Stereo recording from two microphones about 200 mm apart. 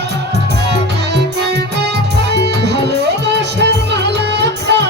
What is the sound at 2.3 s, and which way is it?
Music, 55° right (ahead or behind).